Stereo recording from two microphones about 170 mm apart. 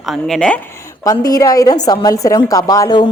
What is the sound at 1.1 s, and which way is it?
A woman's voice, 20° left (ahead or behind).